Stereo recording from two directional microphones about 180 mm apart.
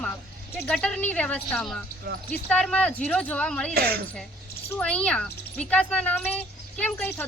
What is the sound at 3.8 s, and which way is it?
Speech, 60° right (ahead or behind).